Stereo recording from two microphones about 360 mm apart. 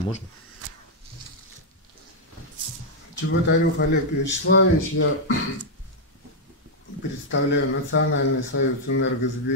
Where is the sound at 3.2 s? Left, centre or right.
Left.